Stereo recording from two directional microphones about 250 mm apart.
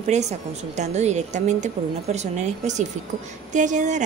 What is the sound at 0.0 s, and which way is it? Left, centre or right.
Speech, right.